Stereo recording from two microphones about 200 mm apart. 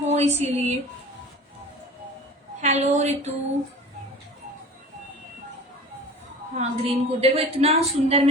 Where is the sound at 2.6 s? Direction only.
35° right (ahead or behind).